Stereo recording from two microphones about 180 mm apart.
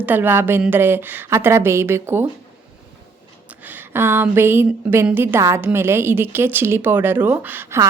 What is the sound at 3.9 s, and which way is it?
A woman's voice, 10° right (ahead or behind).